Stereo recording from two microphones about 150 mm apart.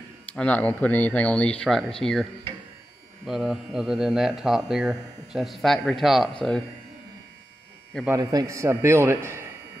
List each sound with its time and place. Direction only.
0.4 s speech: 10° left (ahead or behind)
3.3 s speech: centre (ahead or behind)
8.1 s a man's voice: 25° right (ahead or behind)